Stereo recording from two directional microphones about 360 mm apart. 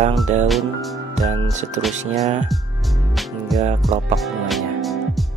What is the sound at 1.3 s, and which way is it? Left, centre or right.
Speech, centre.